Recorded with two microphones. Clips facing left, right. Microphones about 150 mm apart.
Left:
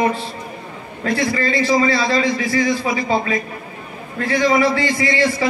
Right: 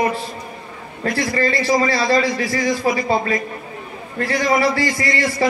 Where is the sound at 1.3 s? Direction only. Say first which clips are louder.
Right 1 dB; 40° right (ahead or behind).